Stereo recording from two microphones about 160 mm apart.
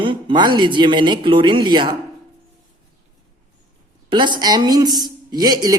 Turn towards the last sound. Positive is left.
turn(degrees=-25)  # may be behind; listen again after turning